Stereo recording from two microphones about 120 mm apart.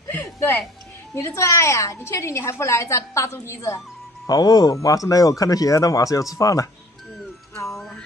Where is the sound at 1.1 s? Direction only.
25° left (ahead or behind).